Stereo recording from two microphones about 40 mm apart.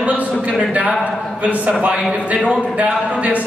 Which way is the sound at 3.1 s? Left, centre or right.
Right.